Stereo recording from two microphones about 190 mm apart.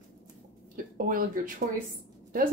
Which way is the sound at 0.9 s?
50° right (ahead or behind).